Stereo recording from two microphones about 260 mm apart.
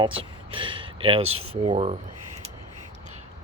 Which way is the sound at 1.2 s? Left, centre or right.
Right.